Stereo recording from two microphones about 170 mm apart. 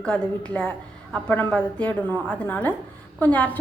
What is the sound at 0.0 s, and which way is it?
A woman's voice, 5° left (ahead or behind).